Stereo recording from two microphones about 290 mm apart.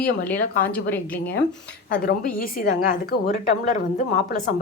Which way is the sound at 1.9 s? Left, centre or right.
Left.